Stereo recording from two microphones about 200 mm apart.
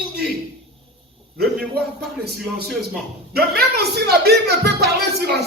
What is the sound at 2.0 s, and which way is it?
Speech, 55° right (ahead or behind).